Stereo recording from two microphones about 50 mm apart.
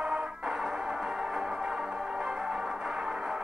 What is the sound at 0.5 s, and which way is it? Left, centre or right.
Music, centre.